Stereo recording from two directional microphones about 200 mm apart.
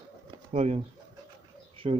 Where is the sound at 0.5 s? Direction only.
35° right (ahead or behind).